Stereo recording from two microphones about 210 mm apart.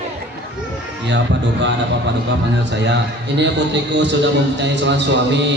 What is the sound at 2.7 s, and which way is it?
A man's voice, 55° right (ahead or behind).